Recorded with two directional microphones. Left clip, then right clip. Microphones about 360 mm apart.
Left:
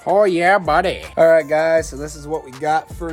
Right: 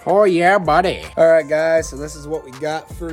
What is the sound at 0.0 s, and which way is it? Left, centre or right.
Speech, centre.